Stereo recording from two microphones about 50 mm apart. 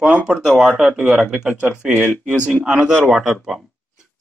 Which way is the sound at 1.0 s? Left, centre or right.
Centre.